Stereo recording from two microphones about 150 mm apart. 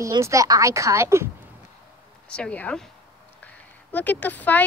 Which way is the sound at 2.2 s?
5° left (ahead or behind).